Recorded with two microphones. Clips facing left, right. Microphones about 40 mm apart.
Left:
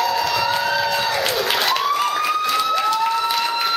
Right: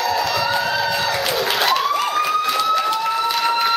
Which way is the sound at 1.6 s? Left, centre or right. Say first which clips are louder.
Right 2 dB; centre.